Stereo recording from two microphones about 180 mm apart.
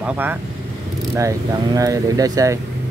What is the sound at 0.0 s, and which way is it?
Speech, 10° right (ahead or behind).